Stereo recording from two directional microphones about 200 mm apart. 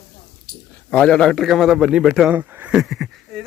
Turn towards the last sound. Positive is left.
turn(degrees=0)  # may be behind; listen again after turning